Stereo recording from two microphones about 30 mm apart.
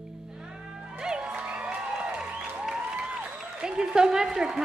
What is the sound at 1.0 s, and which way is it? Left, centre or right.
Music, right.